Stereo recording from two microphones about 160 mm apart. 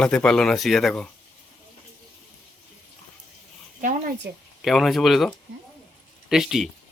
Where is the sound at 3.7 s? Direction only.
55° right (ahead or behind).